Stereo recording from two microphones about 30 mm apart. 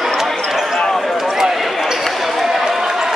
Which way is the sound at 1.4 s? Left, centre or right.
Centre.